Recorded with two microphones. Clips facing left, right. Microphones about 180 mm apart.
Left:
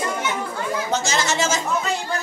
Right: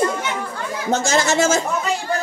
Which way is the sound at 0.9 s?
50° right (ahead or behind).